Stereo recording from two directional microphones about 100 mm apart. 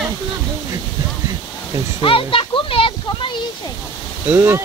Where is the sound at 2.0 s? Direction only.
60° left (ahead or behind).